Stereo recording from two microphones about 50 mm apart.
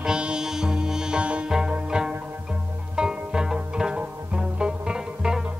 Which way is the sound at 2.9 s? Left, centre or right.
Centre.